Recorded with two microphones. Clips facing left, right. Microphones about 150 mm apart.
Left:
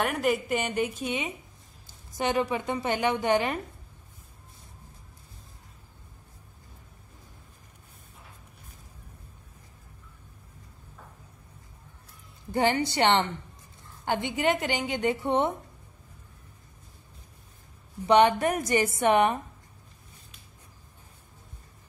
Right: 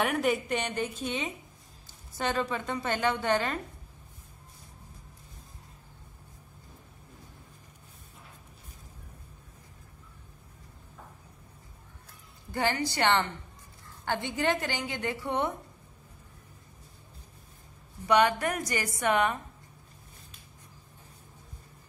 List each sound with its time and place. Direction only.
0.0 s a woman's voice: centre (ahead or behind); by 3.5 s 15° left (ahead or behind)
12.4 s a woman's voice: 20° left (ahead or behind)
18.0 s a woman's voice: 25° left (ahead or behind)